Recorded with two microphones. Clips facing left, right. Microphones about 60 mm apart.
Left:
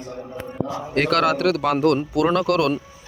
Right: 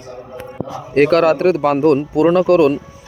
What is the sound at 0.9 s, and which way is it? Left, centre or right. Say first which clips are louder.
Speech: right 7 dB; right.